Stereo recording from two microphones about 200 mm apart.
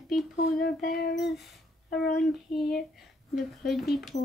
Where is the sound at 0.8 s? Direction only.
50° left (ahead or behind).